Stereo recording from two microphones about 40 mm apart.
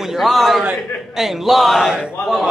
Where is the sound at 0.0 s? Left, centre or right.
Centre.